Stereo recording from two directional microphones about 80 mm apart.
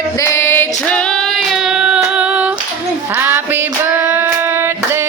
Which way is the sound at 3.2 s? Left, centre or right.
Right.